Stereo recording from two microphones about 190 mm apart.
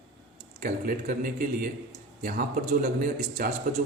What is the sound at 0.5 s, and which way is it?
A man's voice, 45° right (ahead or behind).